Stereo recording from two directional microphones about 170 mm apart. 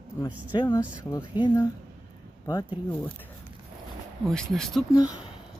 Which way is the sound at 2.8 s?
10° left (ahead or behind).